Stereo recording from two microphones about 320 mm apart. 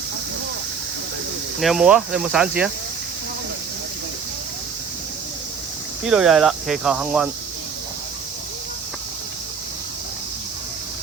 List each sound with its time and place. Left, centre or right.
1.6 s speech: centre
6.1 s speech: centre